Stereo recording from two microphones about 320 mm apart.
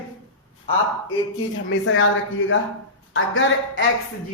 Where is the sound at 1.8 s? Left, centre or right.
Left.